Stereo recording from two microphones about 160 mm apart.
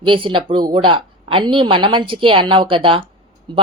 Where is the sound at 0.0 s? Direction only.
30° right (ahead or behind).